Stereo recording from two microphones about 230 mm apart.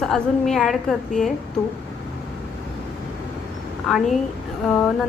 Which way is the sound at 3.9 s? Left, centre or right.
Centre.